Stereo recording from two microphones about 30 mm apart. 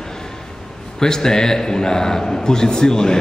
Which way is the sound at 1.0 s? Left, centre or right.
Centre.